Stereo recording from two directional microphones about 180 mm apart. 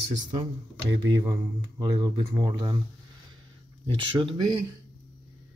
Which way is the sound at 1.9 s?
20° right (ahead or behind).